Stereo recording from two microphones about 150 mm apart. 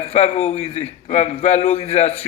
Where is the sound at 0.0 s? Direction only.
45° left (ahead or behind).